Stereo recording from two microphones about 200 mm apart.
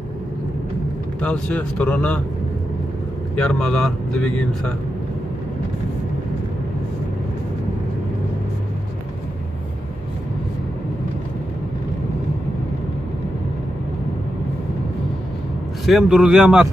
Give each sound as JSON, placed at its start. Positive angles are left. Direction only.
{"t": 1.2, "sound": "a man's voice", "side_deg": 5}
{"t": 3.3, "sound": "speech", "side_deg": 5}
{"t": 15.8, "sound": "speech", "side_deg": 0}